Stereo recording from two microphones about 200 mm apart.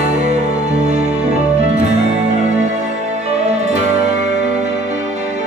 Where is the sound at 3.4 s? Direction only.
35° right (ahead or behind).